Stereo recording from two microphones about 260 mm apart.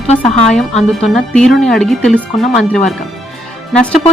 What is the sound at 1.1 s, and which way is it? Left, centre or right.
A woman's voice, centre.